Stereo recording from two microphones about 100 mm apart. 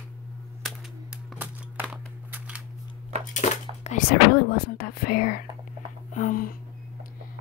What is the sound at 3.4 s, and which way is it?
Whispering, 90° left.